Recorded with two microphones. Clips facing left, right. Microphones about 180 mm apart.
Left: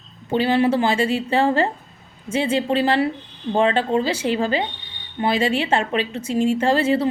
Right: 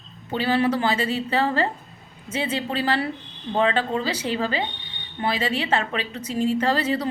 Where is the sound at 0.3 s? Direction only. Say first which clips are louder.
Left 4 dB; 30° left (ahead or behind).